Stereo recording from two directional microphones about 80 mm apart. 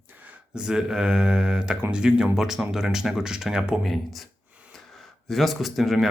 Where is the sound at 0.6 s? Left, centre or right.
Centre.